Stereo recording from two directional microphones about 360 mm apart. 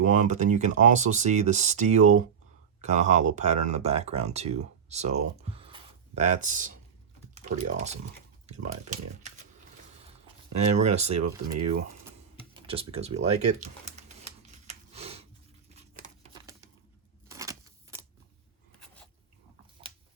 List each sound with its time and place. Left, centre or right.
0.0 s speech: right
7.3 s typing: centre
8.4 s speech: centre
10.5 s speech: centre
14.7 s a sound: centre